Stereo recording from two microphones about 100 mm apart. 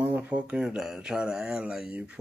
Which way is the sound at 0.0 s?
15° right (ahead or behind).